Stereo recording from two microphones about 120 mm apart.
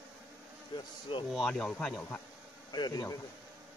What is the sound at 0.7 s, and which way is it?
Speech, 40° left (ahead or behind).